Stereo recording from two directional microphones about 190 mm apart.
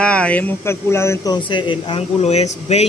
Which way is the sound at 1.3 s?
25° left (ahead or behind).